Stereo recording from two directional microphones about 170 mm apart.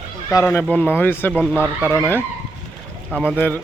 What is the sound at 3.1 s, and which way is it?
Speech, 5° right (ahead or behind).